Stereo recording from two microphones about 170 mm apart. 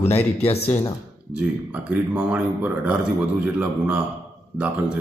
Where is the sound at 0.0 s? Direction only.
35° left (ahead or behind).